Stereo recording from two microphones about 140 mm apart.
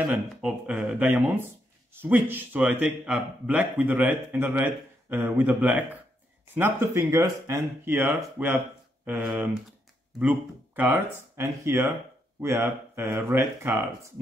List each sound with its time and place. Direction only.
0.0 s speech: 5° right (ahead or behind)
11.3 s speech: 20° right (ahead or behind)